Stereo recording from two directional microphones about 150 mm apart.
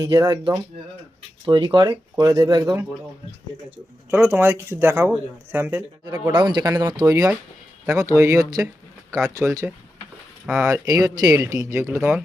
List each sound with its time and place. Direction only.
0.0 s speech: 25° right (ahead or behind)
4.1 s speech: 15° right (ahead or behind)
6.3 s speech: 30° right (ahead or behind)
8.6 s a sound: 20° right (ahead or behind)
9.4 s speech: 15° right (ahead or behind)
10.7 s speech: 25° right (ahead or behind)